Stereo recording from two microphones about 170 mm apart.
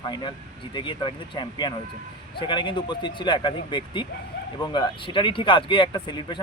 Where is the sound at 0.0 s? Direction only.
25° left (ahead or behind).